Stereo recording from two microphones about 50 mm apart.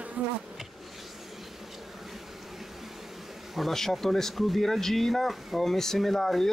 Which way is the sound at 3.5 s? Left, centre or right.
Centre.